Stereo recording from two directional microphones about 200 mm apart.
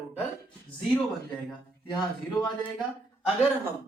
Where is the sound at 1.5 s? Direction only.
20° left (ahead or behind).